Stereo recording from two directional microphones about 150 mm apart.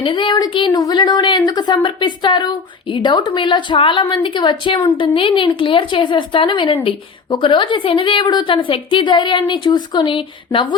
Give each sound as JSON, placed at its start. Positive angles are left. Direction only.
{"t": 0.0, "sound": "a woman's voice", "side_deg": 35}